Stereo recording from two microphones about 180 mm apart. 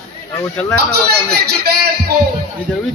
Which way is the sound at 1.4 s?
60° right (ahead or behind).